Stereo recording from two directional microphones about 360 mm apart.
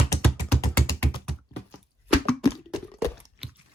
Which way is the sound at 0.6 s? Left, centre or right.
Centre.